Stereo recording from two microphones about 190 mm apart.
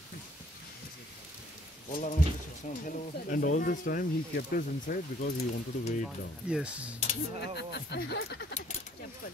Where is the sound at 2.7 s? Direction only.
50° left (ahead or behind).